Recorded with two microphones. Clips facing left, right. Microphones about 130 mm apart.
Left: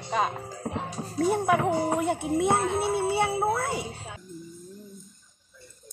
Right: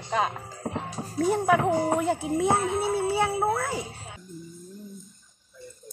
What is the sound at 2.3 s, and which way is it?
Music, 60° left (ahead or behind).